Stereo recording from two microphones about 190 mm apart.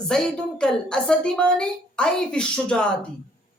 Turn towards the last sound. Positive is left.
turn(degrees=5)  # may be behind; listen again after turning